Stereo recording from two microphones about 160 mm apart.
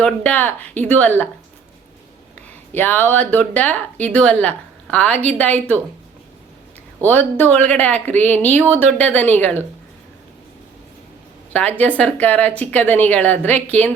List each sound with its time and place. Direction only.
0.0 s a woman's voice: 10° left (ahead or behind)
2.7 s a woman's voice: 10° left (ahead or behind)
7.0 s a woman's voice: 10° left (ahead or behind)
11.5 s a woman's voice: 10° left (ahead or behind)